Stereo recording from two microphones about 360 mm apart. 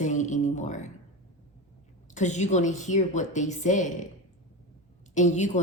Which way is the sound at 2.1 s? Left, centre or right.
Centre.